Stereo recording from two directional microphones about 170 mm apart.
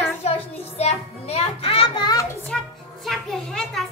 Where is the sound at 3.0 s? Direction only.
Centre (ahead or behind).